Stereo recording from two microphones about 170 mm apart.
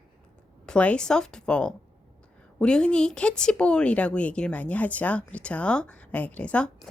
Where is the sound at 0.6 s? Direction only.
5° left (ahead or behind).